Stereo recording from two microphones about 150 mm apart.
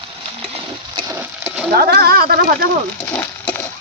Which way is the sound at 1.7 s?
90° right.